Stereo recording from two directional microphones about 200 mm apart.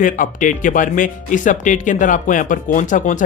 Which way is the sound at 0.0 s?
40° left (ahead or behind).